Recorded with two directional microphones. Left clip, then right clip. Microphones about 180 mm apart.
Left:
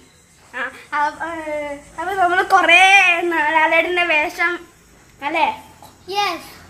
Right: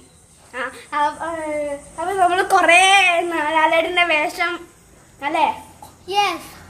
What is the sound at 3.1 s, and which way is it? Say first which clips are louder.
Speech: left 2 dB; 40° right (ahead or behind).